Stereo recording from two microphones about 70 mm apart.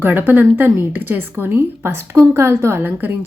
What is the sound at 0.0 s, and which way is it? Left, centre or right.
A woman's voice, right.